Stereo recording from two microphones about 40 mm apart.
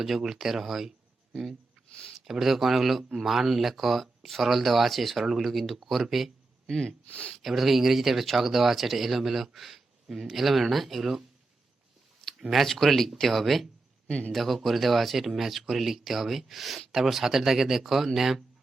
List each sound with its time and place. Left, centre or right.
0.2 s speech: centre
5.1 s speech: centre
5.4 s speech: centre
6.7 s speech: centre
7.1 s speech: left
7.4 s speech: centre
12.4 s speech: centre
14.1 s a man's voice: left
14.3 s speech: centre